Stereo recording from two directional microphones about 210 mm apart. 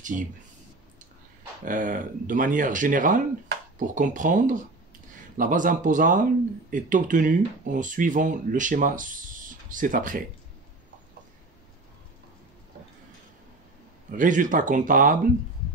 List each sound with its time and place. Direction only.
1.6 s speech: 40° right (ahead or behind)
14.1 s speech: 40° right (ahead or behind)